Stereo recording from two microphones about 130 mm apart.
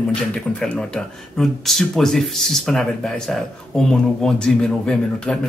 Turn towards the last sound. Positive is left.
turn(degrees=5)  # may be behind; listen again after turning